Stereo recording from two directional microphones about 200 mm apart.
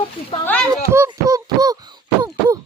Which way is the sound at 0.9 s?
15° right (ahead or behind).